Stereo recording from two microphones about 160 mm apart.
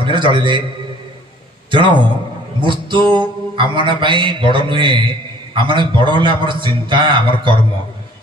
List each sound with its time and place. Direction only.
0.0 s a man's voice: 30° right (ahead or behind)
1.7 s a man's voice: 30° right (ahead or behind)